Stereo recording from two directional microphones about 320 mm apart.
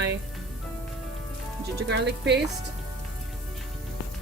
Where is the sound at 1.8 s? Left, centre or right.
Right.